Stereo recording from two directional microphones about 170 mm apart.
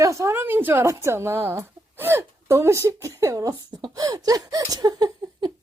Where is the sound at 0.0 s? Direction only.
15° right (ahead or behind).